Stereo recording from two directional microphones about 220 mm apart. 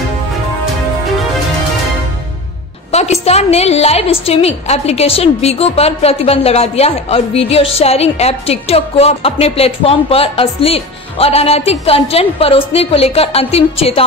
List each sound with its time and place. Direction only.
2.9 s a woman's voice: 30° left (ahead or behind)